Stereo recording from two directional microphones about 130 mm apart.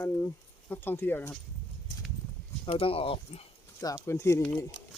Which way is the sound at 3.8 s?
25° left (ahead or behind).